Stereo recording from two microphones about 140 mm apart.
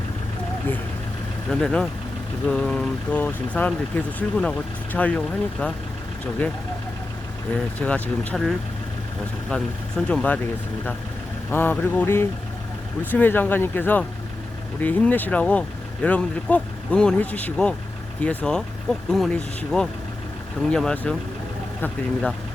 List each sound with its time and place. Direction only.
1.5 s speech: 5° left (ahead or behind)
7.8 s speech: 10° left (ahead or behind)
10.1 s speech: 10° left (ahead or behind)
11.5 s speech: 15° left (ahead or behind)